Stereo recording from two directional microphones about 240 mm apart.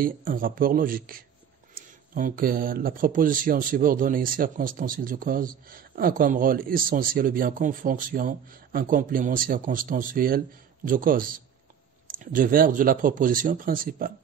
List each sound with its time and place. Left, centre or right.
0.0 s speech: right